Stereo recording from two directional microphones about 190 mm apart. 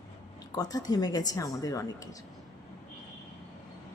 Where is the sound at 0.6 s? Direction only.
20° left (ahead or behind).